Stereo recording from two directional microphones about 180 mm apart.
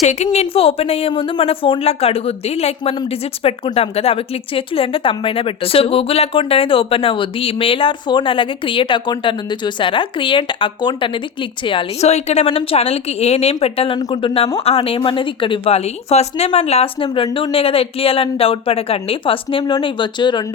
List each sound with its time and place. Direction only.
0.0 s speech: 40° left (ahead or behind)